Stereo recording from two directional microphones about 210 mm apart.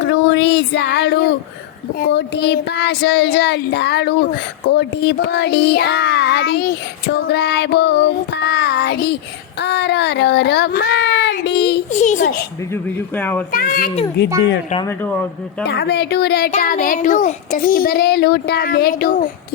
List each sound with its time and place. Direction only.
0.1 s a sound: 60° left (ahead or behind)
2.0 s child singing: 50° left (ahead or behind)
11.9 s a child's voice: 35° left (ahead or behind)
12.7 s speech: 10° left (ahead or behind)
13.5 s child singing: 45° left (ahead or behind)
14.8 s speech: 5° left (ahead or behind)
15.6 s child singing: 55° left (ahead or behind)
16.5 s child singing: 40° left (ahead or behind)